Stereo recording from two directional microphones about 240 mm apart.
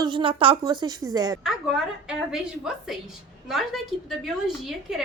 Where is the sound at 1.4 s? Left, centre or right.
Centre.